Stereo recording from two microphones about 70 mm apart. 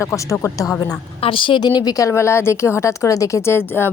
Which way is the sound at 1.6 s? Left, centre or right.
Left.